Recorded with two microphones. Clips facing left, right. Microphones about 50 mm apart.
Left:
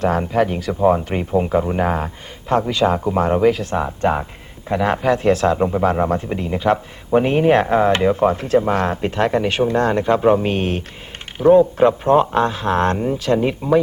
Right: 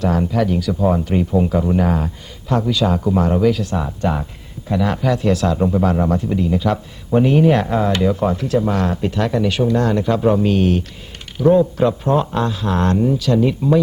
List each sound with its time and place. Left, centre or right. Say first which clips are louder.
0.0 s a man's voice: left 1 dB; left